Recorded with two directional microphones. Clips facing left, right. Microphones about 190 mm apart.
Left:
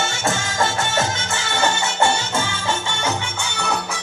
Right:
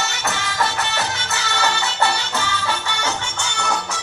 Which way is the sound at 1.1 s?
25° left (ahead or behind).